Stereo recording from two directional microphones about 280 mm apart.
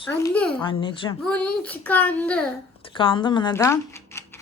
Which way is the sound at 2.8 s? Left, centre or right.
Centre.